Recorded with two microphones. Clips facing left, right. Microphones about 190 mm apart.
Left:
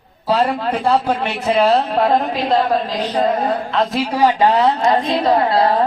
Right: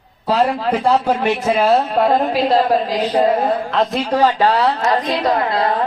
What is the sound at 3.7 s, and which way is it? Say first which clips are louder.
A woman's voice: right 1 dB; centre (ahead or behind).